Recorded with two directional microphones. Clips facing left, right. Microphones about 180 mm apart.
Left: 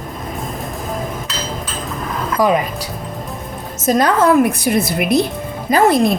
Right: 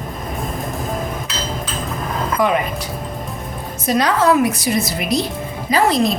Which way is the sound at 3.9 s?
50° left (ahead or behind).